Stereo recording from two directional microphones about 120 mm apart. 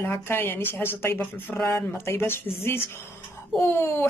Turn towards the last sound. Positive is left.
turn(degrees=20)  # may be behind; listen again after turning